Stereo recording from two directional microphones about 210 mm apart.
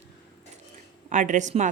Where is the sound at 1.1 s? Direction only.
35° right (ahead or behind).